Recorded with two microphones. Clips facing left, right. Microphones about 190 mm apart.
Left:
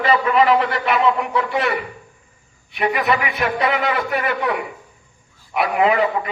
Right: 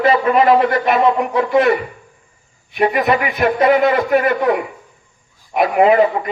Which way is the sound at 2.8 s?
40° right (ahead or behind).